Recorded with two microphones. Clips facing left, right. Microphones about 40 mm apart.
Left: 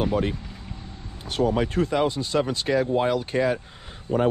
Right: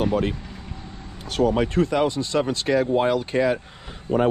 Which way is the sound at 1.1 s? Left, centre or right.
Right.